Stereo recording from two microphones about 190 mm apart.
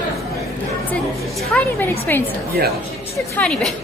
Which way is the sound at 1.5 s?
10° left (ahead or behind).